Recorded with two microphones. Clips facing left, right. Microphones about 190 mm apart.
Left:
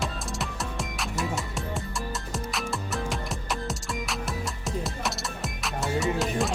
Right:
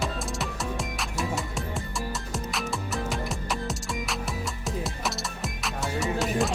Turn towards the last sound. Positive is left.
turn(degrees=0)  # may be behind; listen again after turning